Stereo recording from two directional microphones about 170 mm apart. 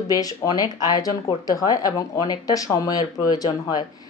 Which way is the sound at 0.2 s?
20° left (ahead or behind).